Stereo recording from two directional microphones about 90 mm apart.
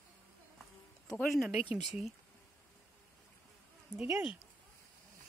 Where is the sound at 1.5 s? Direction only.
15° right (ahead or behind).